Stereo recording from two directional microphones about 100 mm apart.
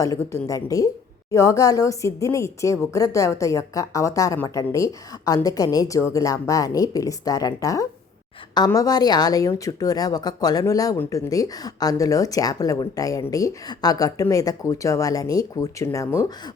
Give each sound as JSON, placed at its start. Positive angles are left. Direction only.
{"t": 0.0, "sound": "speech", "side_deg": 30}